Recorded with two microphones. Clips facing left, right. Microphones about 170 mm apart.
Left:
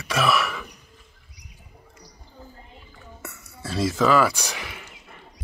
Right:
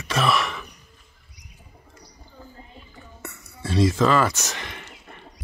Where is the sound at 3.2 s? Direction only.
5° left (ahead or behind).